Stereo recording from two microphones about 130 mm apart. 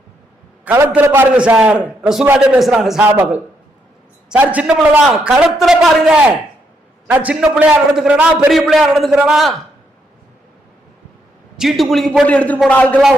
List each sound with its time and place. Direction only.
0.6 s a man's voice: 15° right (ahead or behind); by 9.6 s centre (ahead or behind)
11.5 s a man's voice: centre (ahead or behind)